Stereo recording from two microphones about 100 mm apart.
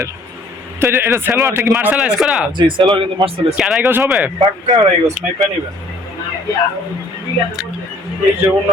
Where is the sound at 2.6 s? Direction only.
55° right (ahead or behind).